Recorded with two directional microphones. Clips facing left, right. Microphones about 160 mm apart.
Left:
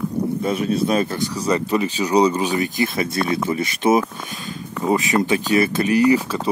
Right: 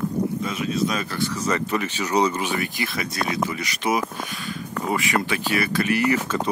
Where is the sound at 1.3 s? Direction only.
10° left (ahead or behind).